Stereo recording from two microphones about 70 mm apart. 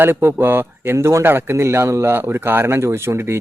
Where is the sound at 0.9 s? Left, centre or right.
Right.